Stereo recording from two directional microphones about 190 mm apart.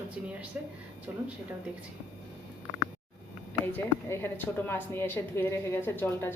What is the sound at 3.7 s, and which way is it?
A woman's voice, 10° left (ahead or behind).